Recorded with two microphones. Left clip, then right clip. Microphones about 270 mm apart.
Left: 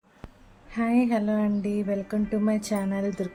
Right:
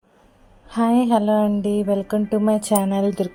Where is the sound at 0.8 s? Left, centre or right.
Centre.